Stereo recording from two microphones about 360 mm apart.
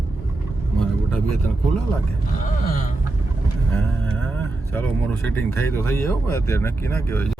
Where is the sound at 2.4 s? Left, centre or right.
Left.